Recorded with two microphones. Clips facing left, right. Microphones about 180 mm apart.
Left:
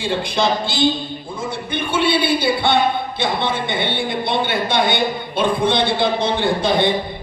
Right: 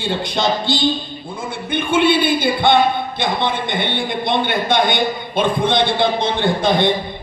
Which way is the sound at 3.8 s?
20° right (ahead or behind).